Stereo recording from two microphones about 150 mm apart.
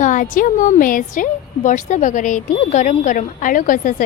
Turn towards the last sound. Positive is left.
turn(degrees=60)  # may be behind; listen again after turning